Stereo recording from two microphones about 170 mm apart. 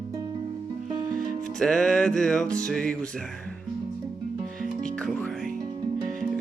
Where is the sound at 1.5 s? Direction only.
5° left (ahead or behind).